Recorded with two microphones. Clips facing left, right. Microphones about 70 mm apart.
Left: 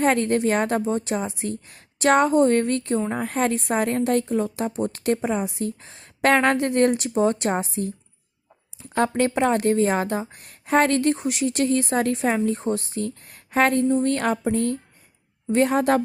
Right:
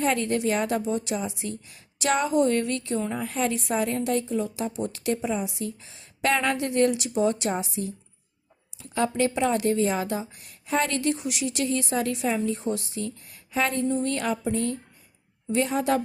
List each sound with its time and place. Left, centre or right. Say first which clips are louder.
0.0 s a woman's voice: left 4 dB; left